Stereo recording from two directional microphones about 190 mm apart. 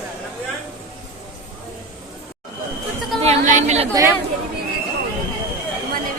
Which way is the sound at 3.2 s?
40° right (ahead or behind).